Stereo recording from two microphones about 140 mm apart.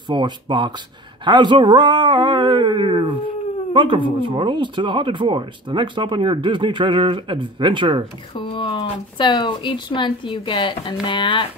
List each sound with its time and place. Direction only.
0.1 s speech: 35° right (ahead or behind)
8.4 s speech: 35° left (ahead or behind)